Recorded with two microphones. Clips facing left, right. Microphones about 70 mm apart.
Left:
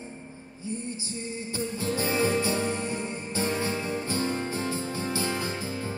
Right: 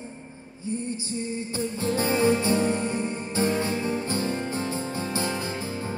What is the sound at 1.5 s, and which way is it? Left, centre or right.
Music, right.